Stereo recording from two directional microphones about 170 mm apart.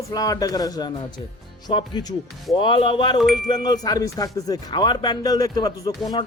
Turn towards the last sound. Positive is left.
turn(degrees=25)  # may be behind; listen again after turning